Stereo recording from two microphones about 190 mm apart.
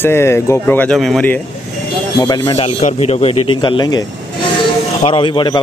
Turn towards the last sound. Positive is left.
turn(degrees=25)  # may be behind; listen again after turning